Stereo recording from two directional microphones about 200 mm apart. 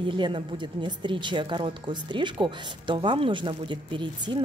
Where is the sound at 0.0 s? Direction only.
25° right (ahead or behind).